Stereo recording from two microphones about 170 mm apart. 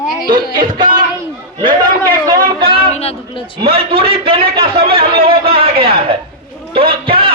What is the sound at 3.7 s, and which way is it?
A man's voice, 35° right (ahead or behind).